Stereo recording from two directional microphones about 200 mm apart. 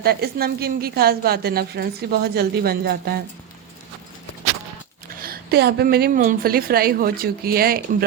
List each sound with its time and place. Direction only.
0.0 s a woman's voice: 50° right (ahead or behind)
5.2 s a woman's voice: 50° right (ahead or behind)